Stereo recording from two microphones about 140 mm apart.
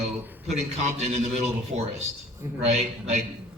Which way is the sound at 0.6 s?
50° right (ahead or behind).